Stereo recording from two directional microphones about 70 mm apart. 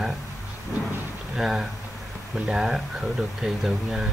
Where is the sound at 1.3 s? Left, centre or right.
Centre.